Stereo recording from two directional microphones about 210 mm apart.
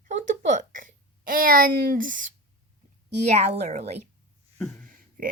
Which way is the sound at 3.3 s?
35° right (ahead or behind).